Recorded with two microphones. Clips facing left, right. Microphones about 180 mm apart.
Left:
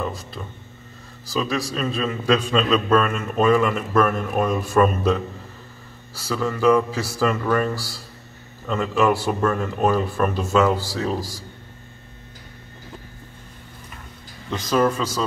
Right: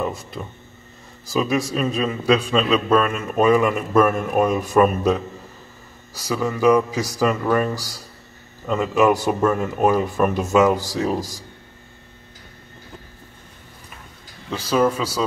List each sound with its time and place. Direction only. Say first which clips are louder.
1.3 s a man's voice: right 3 dB; 20° right (ahead or behind)
14.5 s a man's voice: right 1 dB; 5° right (ahead or behind)